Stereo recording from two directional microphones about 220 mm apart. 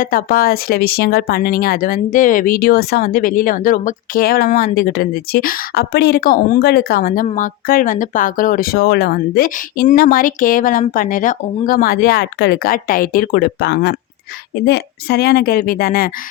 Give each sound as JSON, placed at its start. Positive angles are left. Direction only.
{"t": 0.0, "sound": "speech", "side_deg": 40}